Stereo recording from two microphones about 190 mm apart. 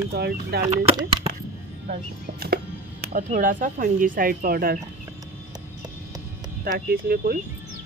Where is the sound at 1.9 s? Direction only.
55° right (ahead or behind).